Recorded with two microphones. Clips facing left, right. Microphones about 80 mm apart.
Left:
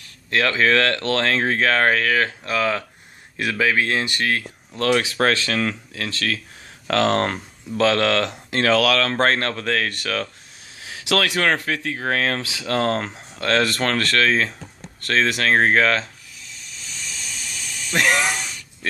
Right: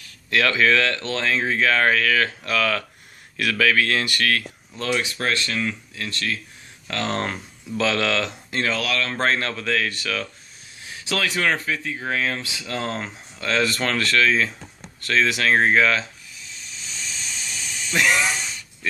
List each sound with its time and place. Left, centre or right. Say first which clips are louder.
0.3 s speech: left 1 dB; left
4.7 s speech: left 6 dB; left
7.7 s speech: left 4 dB; left
8.5 s speech: left 9 dB; left
9.1 s speech: left 3 dB; left
10.8 s speech: left 4 dB; left
16.8 s vehicle: even; right
17.9 s a sound: left 1 dB; left